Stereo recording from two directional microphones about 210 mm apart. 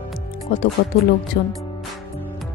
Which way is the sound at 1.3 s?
55° left (ahead or behind).